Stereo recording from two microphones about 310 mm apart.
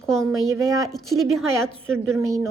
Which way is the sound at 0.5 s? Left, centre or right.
Centre.